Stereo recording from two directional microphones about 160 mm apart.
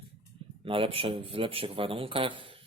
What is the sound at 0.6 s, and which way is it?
Speech, 35° right (ahead or behind).